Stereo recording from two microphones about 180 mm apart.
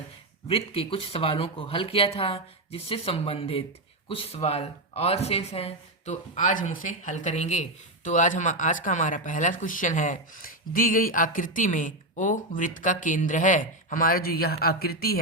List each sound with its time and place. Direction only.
0.4 s speech: 30° left (ahead or behind); by 15.2 s 60° left (ahead or behind)